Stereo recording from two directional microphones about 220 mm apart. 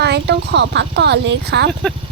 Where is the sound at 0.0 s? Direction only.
50° right (ahead or behind).